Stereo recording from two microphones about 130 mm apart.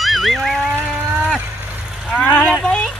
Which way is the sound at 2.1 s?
10° left (ahead or behind).